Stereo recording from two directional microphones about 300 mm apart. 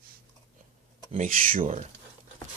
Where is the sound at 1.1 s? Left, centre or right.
Right.